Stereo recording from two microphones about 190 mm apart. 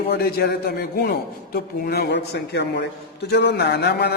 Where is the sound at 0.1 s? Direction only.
55° left (ahead or behind).